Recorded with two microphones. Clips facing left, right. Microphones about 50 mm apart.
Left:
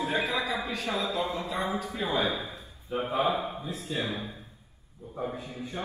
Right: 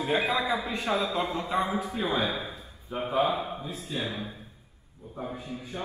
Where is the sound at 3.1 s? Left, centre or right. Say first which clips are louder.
Right 2 dB; centre.